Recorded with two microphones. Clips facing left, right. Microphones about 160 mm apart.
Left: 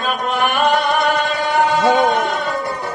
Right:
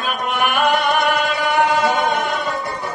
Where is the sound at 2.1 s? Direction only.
Centre (ahead or behind).